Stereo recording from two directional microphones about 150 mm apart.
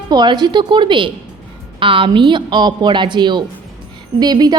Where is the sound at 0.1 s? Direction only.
30° right (ahead or behind).